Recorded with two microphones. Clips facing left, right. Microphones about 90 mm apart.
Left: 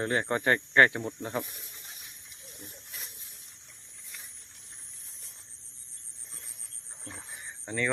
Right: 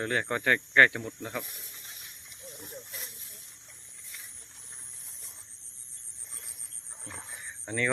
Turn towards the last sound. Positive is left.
turn(degrees=5)  # may be behind; listen again after turning